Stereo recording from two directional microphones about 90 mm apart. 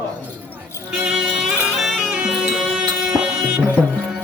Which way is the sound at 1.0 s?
5° right (ahead or behind).